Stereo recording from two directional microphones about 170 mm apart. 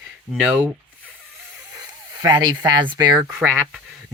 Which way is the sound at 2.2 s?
25° right (ahead or behind).